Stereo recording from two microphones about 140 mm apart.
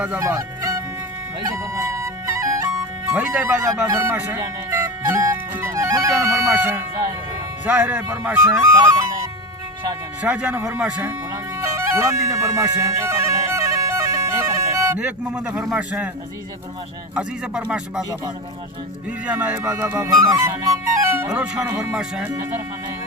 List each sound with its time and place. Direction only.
0.2 s music: 20° right (ahead or behind)
3.1 s speech: 10° right (ahead or behind)
3.6 s music: 20° right (ahead or behind)
7.6 s speech: 10° right (ahead or behind)
8.7 s music: 20° right (ahead or behind)
10.2 s speech: 10° right (ahead or behind)
11.1 s music: 20° right (ahead or behind)
14.9 s speech: 10° right (ahead or behind)
17.2 s speech: 5° right (ahead or behind)
19.2 s speech: 10° right (ahead or behind)
20.1 s speech: 20° right (ahead or behind)